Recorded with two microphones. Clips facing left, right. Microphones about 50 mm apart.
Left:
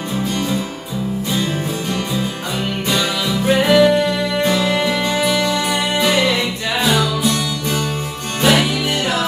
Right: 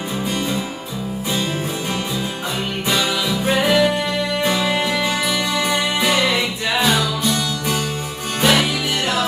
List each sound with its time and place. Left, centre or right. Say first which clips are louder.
3.4 s music: left 4 dB; centre
5.1 s music: left 3 dB; centre